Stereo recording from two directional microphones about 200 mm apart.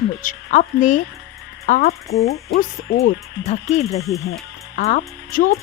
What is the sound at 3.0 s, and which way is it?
A woman's voice, 35° left (ahead or behind).